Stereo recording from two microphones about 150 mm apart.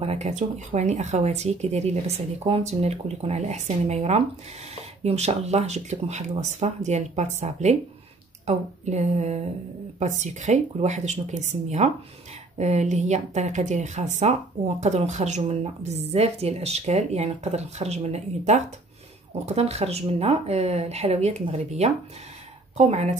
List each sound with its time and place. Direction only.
0.0 s speech: 45° right (ahead or behind)